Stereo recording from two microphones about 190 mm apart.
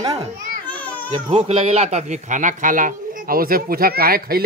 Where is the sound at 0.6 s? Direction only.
5° left (ahead or behind).